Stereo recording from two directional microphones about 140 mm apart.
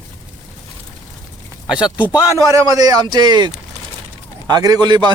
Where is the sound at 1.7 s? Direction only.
10° right (ahead or behind).